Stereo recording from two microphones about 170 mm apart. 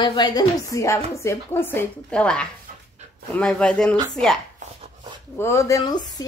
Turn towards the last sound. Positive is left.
turn(degrees=25)  # may be behind; listen again after turning